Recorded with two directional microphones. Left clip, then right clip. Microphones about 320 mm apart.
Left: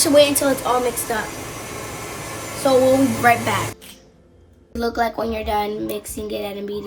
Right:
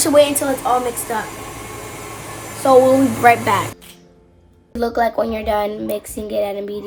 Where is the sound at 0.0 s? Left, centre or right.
Centre.